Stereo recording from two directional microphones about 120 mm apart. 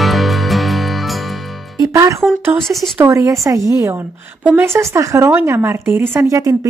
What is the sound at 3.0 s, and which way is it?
Speech, 25° right (ahead or behind).